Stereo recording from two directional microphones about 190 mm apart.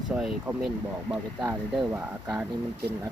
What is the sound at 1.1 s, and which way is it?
Speech, 20° right (ahead or behind).